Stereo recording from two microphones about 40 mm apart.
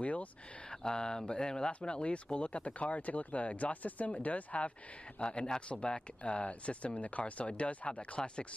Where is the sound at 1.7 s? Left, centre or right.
Left.